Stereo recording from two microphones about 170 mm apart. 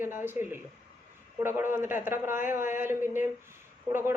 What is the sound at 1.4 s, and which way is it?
A woman's voice, 15° right (ahead or behind).